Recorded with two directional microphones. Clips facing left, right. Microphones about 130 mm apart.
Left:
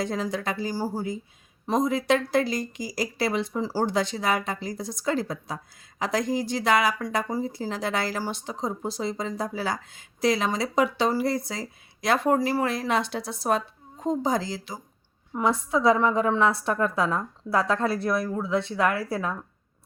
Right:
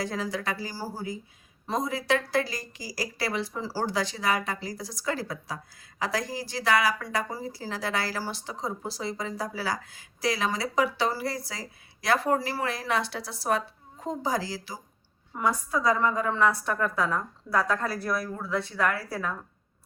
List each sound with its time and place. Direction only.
0.0 s speech: 20° left (ahead or behind)